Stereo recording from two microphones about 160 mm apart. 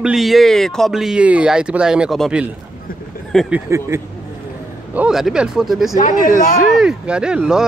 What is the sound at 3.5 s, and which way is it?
Speech, 15° right (ahead or behind).